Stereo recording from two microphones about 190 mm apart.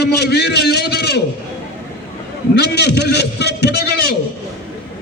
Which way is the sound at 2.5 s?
60° left (ahead or behind).